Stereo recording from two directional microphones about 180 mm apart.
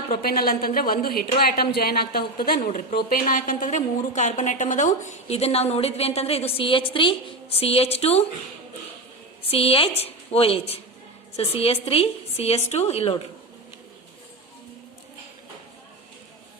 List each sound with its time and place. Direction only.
0.1 s a woman's voice: 55° left (ahead or behind)
2.6 s a woman's voice: 45° left (ahead or behind)
9.5 s a woman's voice: 30° left (ahead or behind)